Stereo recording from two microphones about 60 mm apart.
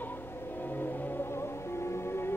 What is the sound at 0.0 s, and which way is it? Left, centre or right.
Music, left.